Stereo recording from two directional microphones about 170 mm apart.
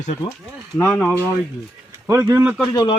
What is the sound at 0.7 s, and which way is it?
Speech, 5° left (ahead or behind).